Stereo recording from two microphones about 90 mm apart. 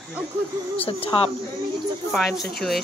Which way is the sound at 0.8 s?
90° left.